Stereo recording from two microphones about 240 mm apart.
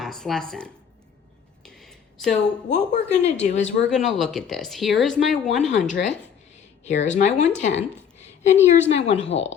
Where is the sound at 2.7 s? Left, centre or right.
Left.